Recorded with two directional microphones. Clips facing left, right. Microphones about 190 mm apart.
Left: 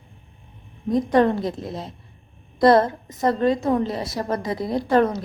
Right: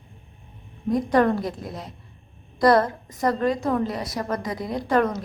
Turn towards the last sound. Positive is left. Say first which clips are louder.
# left 3 dB
turn(degrees=30)  # may be behind; listen again after turning